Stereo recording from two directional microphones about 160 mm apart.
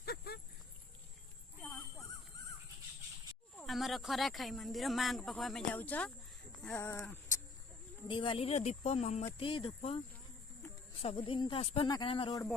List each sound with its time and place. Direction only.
0.0 s a sound: 85° left
1.6 s a sound: 10° left (ahead or behind)
3.6 s speech: centre (ahead or behind); by 7.3 s 20° left (ahead or behind)
8.0 s speech: 30° left (ahead or behind)
9.2 s speech: 35° left (ahead or behind)
11.0 s speech: 35° left (ahead or behind)